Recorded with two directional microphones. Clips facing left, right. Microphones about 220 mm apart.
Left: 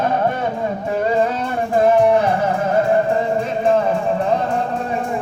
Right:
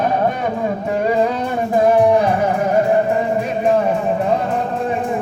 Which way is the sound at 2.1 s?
15° right (ahead or behind).